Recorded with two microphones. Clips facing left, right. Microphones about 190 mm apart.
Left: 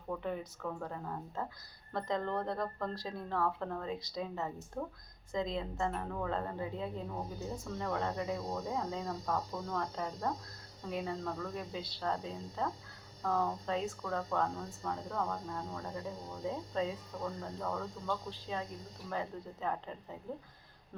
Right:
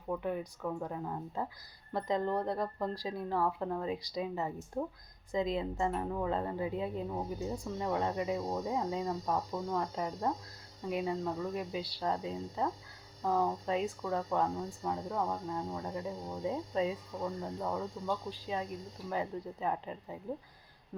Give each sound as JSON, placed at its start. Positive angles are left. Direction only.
{"t": 0.1, "sound": "speech", "side_deg": -10}